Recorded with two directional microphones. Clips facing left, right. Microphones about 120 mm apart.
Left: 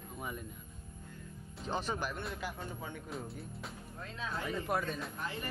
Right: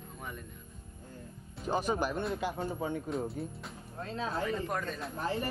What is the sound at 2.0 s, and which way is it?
Speech, 35° right (ahead or behind).